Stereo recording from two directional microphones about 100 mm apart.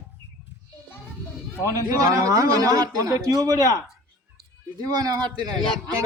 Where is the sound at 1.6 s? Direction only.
35° right (ahead or behind).